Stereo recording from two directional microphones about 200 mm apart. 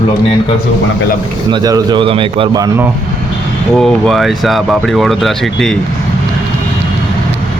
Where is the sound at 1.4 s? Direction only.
20° right (ahead or behind).